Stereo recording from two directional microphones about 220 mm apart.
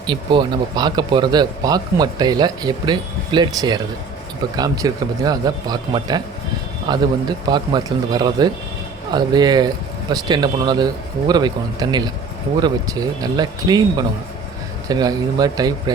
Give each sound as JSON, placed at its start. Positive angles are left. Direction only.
{"t": 0.1, "sound": "speech", "side_deg": -20}